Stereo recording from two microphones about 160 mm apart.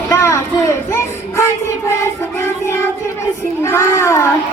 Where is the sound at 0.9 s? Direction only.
15° left (ahead or behind).